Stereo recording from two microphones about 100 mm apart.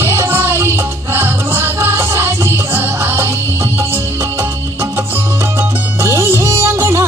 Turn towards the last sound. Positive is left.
turn(degrees=-30)  # may be behind; listen again after turning